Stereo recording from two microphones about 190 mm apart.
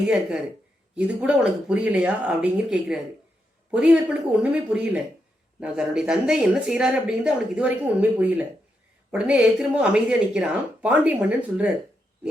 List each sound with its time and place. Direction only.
0.1 s speech: 5° right (ahead or behind)